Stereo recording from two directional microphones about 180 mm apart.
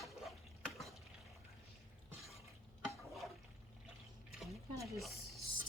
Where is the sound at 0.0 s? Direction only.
Centre (ahead or behind).